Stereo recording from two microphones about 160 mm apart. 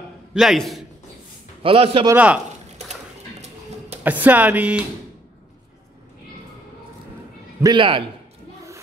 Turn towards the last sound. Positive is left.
turn(degrees=-30)  # may be behind; listen again after turning